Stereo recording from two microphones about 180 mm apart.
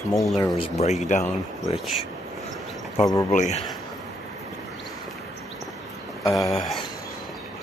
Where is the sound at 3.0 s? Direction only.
20° left (ahead or behind).